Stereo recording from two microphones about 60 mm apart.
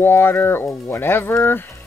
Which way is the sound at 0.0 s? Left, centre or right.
Left.